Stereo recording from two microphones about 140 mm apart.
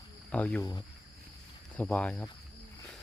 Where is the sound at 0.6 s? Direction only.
25° left (ahead or behind).